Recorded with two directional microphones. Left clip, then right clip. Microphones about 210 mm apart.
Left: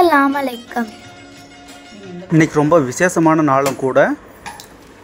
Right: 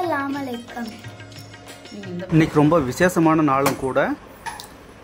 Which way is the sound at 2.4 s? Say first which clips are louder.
Left 4 dB; 10° left (ahead or behind).